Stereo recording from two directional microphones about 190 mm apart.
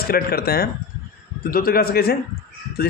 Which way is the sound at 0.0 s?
55° left (ahead or behind).